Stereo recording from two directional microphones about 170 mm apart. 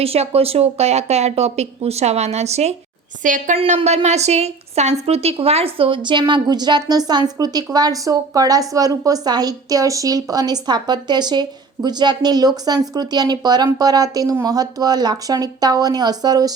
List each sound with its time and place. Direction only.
0.0 s speech: 35° right (ahead or behind)
3.2 s a woman's voice: 50° right (ahead or behind)
3.6 s a woman's voice: 35° right (ahead or behind)